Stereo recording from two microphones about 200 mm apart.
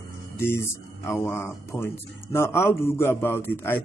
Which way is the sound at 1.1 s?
10° left (ahead or behind).